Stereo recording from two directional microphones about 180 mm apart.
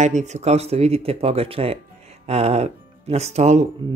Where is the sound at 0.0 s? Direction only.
40° right (ahead or behind).